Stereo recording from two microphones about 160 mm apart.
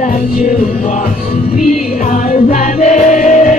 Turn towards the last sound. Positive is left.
turn(degrees=50)  # may be behind; listen again after turning